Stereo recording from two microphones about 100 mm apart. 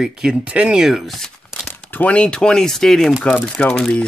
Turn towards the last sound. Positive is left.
turn(degrees=10)  # may be behind; listen again after turning